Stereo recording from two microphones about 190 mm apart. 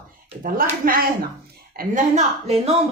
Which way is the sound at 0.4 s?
50° right (ahead or behind).